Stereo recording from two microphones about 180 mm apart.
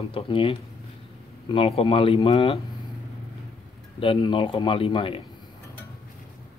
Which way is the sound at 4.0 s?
30° left (ahead or behind).